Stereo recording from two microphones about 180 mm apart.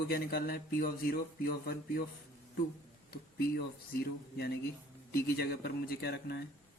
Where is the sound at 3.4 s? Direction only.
60° left (ahead or behind).